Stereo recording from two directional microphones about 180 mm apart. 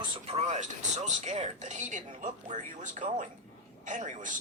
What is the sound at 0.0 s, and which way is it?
Speech, 35° right (ahead or behind).